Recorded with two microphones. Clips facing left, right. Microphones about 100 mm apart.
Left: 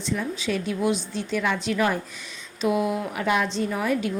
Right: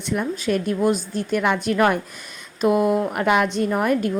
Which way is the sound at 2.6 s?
50° right (ahead or behind).